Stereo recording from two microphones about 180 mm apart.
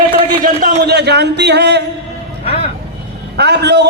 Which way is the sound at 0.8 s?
65° right (ahead or behind).